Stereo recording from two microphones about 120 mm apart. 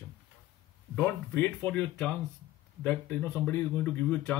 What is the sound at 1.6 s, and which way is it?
Speech, 10° left (ahead or behind).